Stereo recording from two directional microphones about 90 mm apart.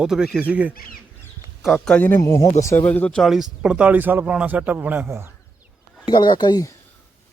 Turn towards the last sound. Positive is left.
turn(degrees=55)  # may be behind; listen again after turning